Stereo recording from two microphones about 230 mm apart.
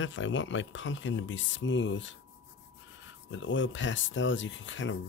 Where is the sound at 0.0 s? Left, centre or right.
Left.